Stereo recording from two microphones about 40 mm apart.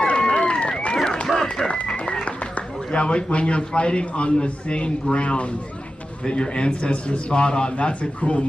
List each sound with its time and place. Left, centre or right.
0.0 s run: left
1.2 s run: centre
2.2 s a man's voice: left